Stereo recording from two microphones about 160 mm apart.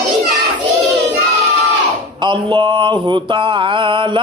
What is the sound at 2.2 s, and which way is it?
Mantra, 30° right (ahead or behind).